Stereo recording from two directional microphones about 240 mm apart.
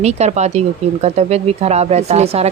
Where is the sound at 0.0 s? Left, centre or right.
Right.